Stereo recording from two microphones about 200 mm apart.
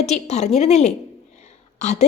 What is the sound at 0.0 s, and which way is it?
A woman's voice, 35° left (ahead or behind).